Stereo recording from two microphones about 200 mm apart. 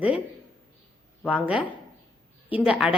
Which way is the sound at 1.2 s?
5° right (ahead or behind).